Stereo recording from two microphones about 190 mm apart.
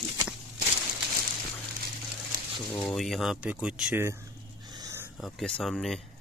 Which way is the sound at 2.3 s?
50° right (ahead or behind).